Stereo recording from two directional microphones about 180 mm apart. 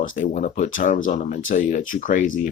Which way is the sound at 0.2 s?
45° left (ahead or behind).